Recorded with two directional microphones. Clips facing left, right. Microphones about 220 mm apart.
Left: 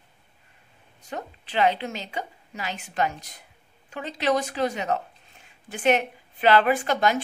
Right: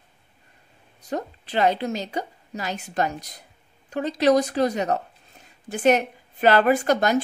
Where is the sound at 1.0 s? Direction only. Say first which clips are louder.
Right 6 dB; 40° right (ahead or behind).